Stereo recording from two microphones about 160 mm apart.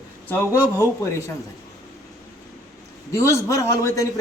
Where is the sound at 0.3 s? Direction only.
15° left (ahead or behind).